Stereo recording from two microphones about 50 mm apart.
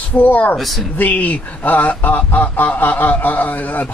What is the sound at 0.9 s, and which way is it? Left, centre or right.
Speech, left.